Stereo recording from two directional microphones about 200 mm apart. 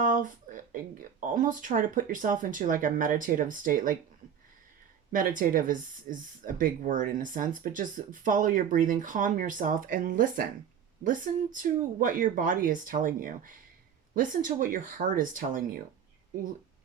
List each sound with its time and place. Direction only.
0.0 s speech: 40° right (ahead or behind)
5.1 s speech: 40° right (ahead or behind)